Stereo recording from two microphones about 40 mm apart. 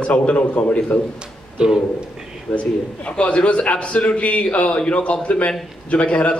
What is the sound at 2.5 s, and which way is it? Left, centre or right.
Speech, left.